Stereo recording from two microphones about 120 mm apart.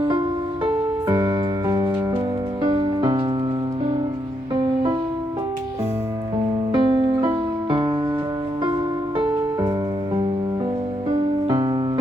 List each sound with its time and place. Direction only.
0.0 s music: 45° right (ahead or behind)
2.6 s music: 40° right (ahead or behind)
4.6 s music: 45° right (ahead or behind)
6.7 s music: 40° right (ahead or behind)
11.4 s music: 35° right (ahead or behind)